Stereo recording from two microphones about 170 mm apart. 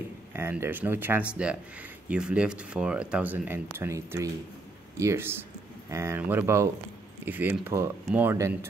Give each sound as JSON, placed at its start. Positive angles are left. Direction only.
{"t": 0.3, "sound": "speech", "side_deg": -15}